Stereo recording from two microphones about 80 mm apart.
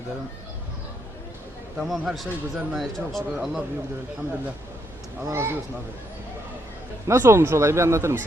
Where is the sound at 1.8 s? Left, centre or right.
Centre.